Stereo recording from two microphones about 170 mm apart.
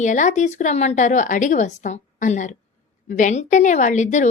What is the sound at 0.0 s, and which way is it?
A woman's voice, 45° left (ahead or behind).